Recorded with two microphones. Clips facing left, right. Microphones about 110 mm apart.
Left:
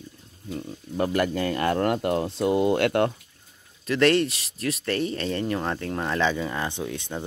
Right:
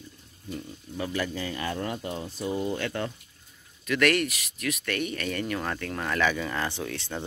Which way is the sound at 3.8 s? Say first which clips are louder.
Left 4 dB; 30° left (ahead or behind).